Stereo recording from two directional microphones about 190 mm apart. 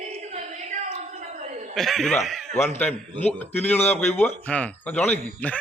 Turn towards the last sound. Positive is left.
turn(degrees=10)  # may be behind; listen again after turning